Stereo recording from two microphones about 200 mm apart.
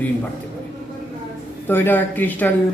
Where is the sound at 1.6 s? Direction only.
10° left (ahead or behind).